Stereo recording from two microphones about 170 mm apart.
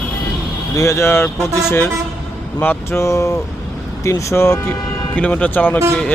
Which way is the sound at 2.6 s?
15° left (ahead or behind).